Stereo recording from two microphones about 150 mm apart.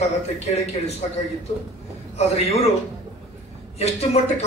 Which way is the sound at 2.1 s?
45° left (ahead or behind).